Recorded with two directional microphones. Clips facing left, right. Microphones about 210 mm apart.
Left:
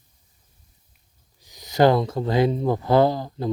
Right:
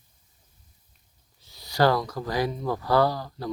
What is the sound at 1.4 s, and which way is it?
Speech, 15° left (ahead or behind).